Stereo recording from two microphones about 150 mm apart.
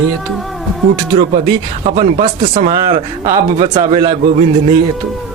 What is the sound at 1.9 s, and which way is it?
Speech, 45° right (ahead or behind).